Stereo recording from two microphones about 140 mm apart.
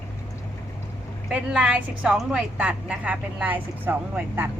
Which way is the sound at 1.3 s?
5° right (ahead or behind).